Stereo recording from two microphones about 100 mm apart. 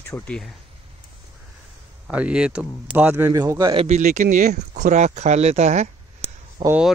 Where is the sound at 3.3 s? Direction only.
30° right (ahead or behind).